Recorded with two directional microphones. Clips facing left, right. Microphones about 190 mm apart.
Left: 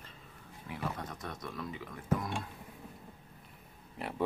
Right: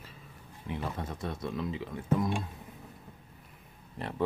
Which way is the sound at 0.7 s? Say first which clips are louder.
Right 3 dB; 25° right (ahead or behind).